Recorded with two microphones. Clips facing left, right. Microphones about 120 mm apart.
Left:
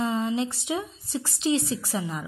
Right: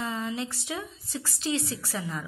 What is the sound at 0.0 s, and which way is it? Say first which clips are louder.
A woman's voice: left 6 dB; 20° left (ahead or behind).